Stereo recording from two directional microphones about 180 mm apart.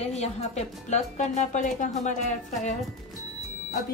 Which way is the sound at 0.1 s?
40° left (ahead or behind).